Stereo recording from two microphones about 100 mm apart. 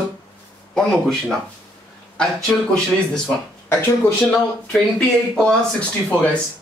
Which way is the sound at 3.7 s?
20° left (ahead or behind).